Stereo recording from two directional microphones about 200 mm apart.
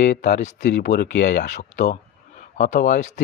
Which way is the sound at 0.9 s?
60° left (ahead or behind).